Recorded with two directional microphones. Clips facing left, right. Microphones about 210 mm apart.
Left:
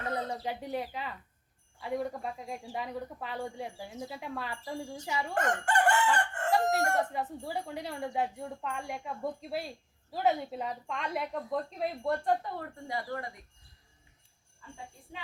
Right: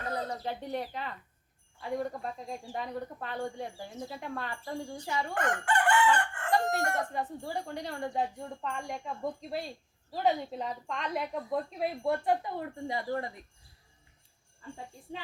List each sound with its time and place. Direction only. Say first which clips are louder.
0.3 s speech: even; 10° left (ahead or behind)
5.3 s chicken: left 1 dB; 45° left (ahead or behind)
6.5 s crowing: left 1 dB; 5° left (ahead or behind)
7.1 s speech: even; 5° left (ahead or behind); by 13.3 s 25° right (ahead or behind)